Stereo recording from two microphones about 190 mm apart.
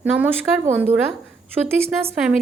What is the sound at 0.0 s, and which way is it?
Speech, 10° right (ahead or behind).